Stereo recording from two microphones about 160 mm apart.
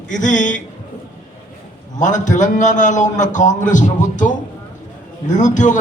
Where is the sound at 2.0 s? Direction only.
50° left (ahead or behind).